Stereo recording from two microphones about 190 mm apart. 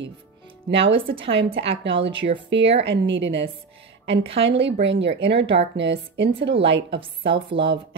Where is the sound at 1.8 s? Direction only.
70° right (ahead or behind).